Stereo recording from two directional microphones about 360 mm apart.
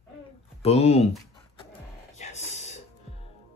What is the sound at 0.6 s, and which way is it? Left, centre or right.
Speech, centre.